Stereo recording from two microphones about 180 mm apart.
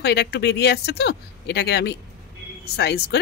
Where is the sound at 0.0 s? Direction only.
65° left (ahead or behind).